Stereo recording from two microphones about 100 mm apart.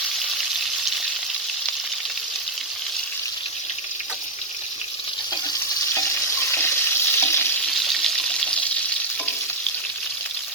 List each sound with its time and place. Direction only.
5.9 s frying: 30° left (ahead or behind)
7.7 s water: centre (ahead or behind)